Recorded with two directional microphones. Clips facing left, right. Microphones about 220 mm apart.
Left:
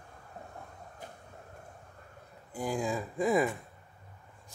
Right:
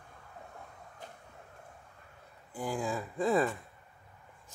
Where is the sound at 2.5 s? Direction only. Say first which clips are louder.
Left 2 dB; 15° left (ahead or behind).